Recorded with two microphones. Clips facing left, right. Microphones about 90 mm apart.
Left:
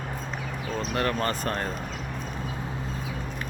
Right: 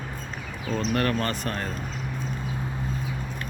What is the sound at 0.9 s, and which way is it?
Speech, 25° left (ahead or behind).